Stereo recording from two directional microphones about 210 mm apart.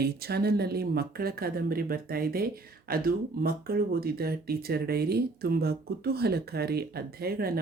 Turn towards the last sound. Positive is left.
turn(degrees=-45)  # may be behind; listen again after turning